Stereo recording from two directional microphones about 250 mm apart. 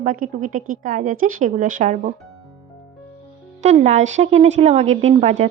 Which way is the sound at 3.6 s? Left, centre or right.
Right.